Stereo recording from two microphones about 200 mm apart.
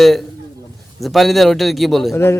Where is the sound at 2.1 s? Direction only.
10° left (ahead or behind).